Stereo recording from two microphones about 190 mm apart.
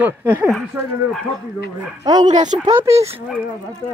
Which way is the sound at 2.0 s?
20° right (ahead or behind).